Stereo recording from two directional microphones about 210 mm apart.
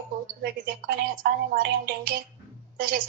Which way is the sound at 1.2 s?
50° right (ahead or behind).